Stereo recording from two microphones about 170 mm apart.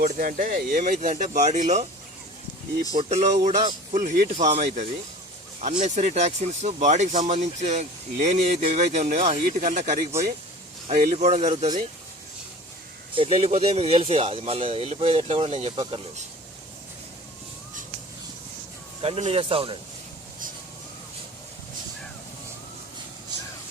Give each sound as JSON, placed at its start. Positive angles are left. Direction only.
{"t": 0.0, "sound": "speech", "side_deg": -55}
{"t": 2.9, "sound": "speech", "side_deg": -35}
{"t": 11.0, "sound": "speech", "side_deg": -45}
{"t": 13.1, "sound": "speech", "side_deg": -35}
{"t": 19.0, "sound": "speech", "side_deg": -35}